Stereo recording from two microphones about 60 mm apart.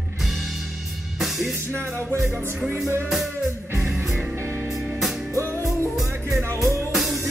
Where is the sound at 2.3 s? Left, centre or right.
Right.